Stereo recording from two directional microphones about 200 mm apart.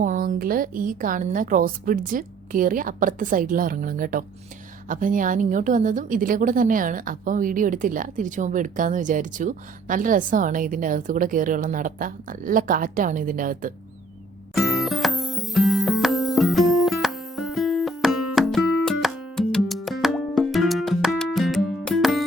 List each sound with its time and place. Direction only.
0.0 s a woman's voice: 40° right (ahead or behind)
14.5 s music: centre (ahead or behind)